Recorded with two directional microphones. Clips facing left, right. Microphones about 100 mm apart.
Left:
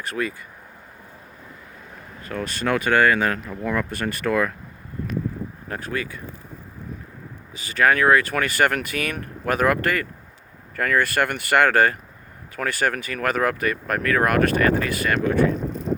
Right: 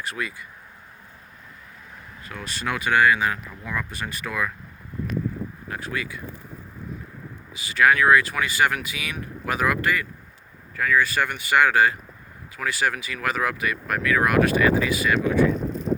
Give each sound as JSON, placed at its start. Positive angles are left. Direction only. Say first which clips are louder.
{"t": 0.0, "sound": "speech", "louder": "left 4 dB", "side_deg": 45}
{"t": 2.2, "sound": "speech", "louder": "left 5 dB", "side_deg": 45}
{"t": 5.6, "sound": "speech", "louder": "left 3 dB", "side_deg": 40}
{"t": 7.5, "sound": "speech", "louder": "even", "side_deg": 45}